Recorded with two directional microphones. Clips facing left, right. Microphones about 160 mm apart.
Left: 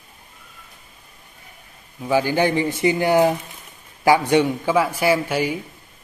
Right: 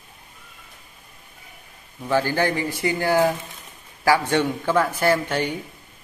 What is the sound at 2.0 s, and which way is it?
A man's voice, 10° left (ahead or behind).